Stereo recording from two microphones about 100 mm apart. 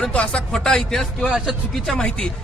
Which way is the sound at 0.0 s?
10° left (ahead or behind).